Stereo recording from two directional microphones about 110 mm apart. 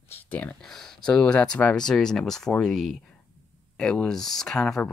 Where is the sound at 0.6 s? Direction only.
5° left (ahead or behind).